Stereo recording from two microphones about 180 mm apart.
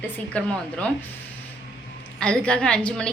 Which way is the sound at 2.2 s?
5° left (ahead or behind).